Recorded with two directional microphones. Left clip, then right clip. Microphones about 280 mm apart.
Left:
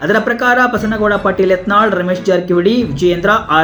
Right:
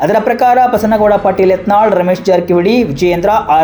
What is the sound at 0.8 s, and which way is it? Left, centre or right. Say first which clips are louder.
Speech: right 5 dB; right.